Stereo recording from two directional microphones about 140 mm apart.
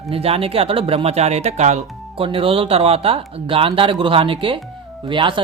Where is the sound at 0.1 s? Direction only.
45° right (ahead or behind).